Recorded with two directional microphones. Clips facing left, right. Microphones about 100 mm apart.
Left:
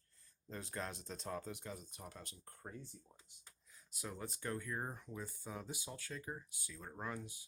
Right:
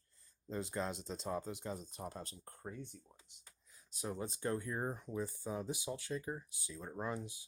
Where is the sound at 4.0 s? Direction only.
20° right (ahead or behind).